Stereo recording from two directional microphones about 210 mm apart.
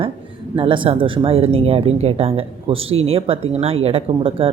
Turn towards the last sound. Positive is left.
turn(degrees=-25)  # may be behind; listen again after turning